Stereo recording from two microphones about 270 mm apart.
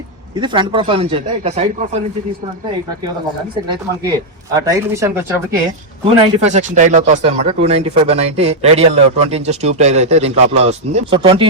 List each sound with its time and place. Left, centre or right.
0.3 s speech: centre
3.7 s speech: centre
6.1 s speech: right